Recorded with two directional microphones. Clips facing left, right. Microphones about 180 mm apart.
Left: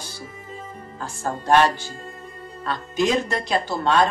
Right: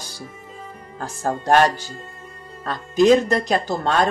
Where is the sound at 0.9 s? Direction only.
45° right (ahead or behind).